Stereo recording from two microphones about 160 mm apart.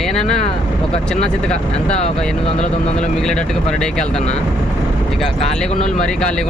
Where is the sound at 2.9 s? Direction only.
5° left (ahead or behind).